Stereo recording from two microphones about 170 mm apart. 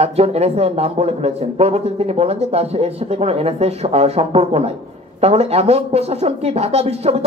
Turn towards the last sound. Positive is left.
turn(degrees=-40)  # may be behind; listen again after turning